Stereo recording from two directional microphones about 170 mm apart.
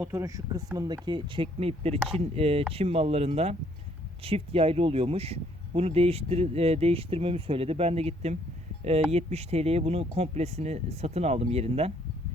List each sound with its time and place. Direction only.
0.0 s speech: 15° right (ahead or behind); by 11.9 s 35° right (ahead or behind)